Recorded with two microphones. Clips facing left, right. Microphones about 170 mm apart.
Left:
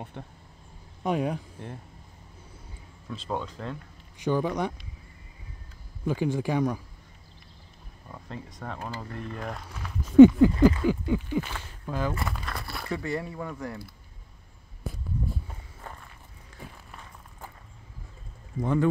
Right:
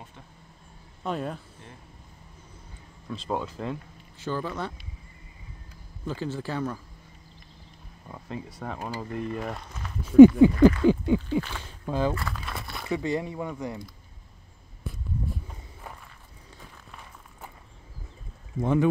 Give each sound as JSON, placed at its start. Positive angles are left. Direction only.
{"t": 0.2, "sound": "speech", "side_deg": 60}
{"t": 1.0, "sound": "speech", "side_deg": 15}
{"t": 3.1, "sound": "speech", "side_deg": -5}
{"t": 4.2, "sound": "speech", "side_deg": 15}
{"t": 6.0, "sound": "speech", "side_deg": 15}
{"t": 8.1, "sound": "speech", "side_deg": -5}
{"t": 10.2, "sound": "speech", "side_deg": -20}
{"t": 12.3, "sound": "crumpling", "side_deg": 0}
{"t": 12.8, "sound": "speech", "side_deg": -15}
{"t": 18.6, "sound": "speech", "side_deg": -20}